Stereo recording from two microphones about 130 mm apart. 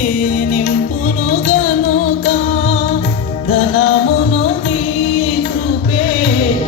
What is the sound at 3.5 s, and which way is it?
Music, 50° left (ahead or behind).